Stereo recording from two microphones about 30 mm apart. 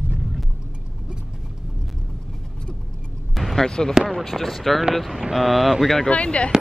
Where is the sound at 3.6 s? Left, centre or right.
Left.